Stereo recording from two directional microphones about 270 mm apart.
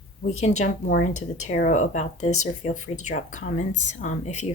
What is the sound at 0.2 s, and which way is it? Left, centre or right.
Speech, left.